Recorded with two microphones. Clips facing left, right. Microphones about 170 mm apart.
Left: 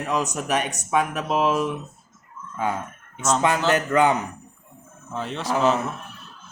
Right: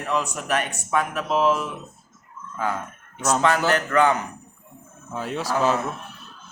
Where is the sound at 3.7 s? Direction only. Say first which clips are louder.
Left 1 dB; 20° left (ahead or behind).